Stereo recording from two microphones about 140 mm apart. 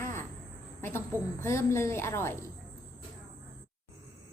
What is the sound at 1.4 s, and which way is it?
A woman's voice, 20° left (ahead or behind).